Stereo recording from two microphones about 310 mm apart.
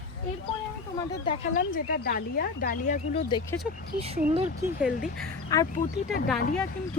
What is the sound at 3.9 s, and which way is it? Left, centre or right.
Speech, centre.